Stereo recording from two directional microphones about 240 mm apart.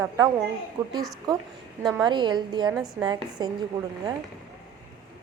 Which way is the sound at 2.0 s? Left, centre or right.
Centre.